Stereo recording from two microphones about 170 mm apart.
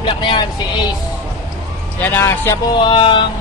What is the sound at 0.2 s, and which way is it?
Speech, 30° left (ahead or behind).